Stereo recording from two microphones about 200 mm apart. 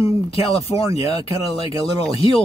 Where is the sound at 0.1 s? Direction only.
30° left (ahead or behind).